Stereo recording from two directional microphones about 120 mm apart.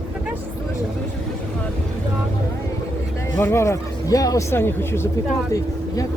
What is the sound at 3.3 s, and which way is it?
Speech, 20° left (ahead or behind).